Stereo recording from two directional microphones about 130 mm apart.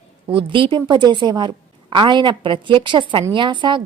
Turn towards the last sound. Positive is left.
turn(degrees=-35)  # may be behind; listen again after turning